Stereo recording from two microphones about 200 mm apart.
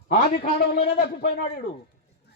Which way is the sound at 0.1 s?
45° left (ahead or behind).